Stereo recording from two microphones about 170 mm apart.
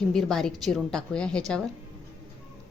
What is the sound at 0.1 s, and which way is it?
A woman's voice, centre (ahead or behind).